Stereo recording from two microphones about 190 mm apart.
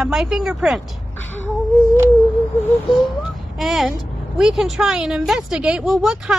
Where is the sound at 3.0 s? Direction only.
Centre (ahead or behind).